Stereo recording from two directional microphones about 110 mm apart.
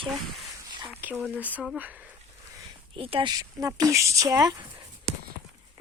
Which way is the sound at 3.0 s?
60° right (ahead or behind).